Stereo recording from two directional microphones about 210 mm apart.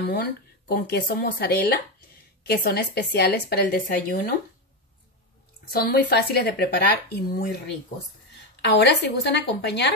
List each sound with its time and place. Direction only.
0.1 s speech: 45° left (ahead or behind)
5.7 s speech: 45° left (ahead or behind)
8.5 s speech: 55° left (ahead or behind)